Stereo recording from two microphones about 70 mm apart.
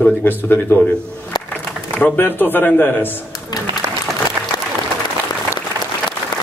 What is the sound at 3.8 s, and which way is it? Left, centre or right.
Applause, right.